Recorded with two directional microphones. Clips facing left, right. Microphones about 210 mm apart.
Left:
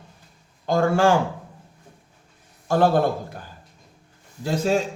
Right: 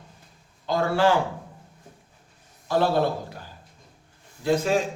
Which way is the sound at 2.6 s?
50° left (ahead or behind).